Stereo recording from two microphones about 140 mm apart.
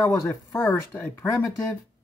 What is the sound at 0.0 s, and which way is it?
Speech, 20° left (ahead or behind).